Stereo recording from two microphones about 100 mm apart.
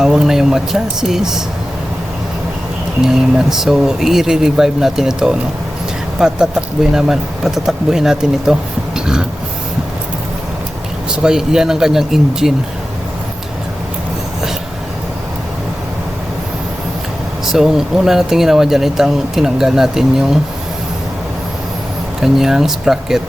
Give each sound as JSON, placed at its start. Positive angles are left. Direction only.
{"t": 0.0, "sound": "speech", "side_deg": -5}
{"t": 3.0, "sound": "speech", "side_deg": -5}
{"t": 11.1, "sound": "speech", "side_deg": -5}
{"t": 17.4, "sound": "speech", "side_deg": -5}
{"t": 22.2, "sound": "speech", "side_deg": -5}